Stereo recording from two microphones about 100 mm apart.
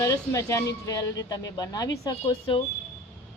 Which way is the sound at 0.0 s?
35° left (ahead or behind).